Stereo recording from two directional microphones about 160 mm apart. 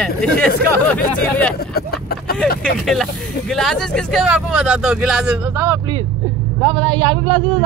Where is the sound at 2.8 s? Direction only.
Centre (ahead or behind).